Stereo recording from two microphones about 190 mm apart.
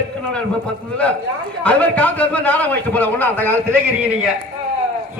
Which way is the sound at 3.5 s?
10° right (ahead or behind).